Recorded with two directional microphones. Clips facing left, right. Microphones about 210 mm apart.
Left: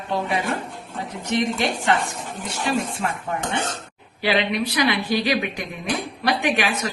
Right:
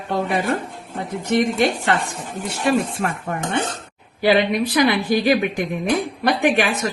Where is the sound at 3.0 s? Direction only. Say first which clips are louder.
Right 2 dB; 50° right (ahead or behind).